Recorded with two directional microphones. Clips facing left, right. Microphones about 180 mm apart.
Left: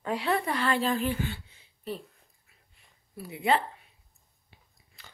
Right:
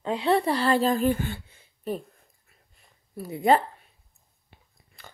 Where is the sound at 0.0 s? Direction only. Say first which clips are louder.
Right 5 dB; 20° right (ahead or behind).